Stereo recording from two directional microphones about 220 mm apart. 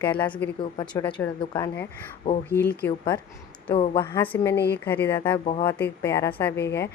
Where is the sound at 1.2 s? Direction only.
10° left (ahead or behind).